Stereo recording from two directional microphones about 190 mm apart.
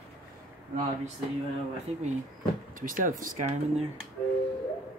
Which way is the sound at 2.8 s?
45° right (ahead or behind).